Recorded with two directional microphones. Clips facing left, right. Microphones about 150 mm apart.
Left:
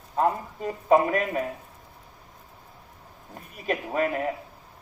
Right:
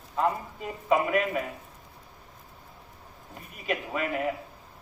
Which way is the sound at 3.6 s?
40° left (ahead or behind).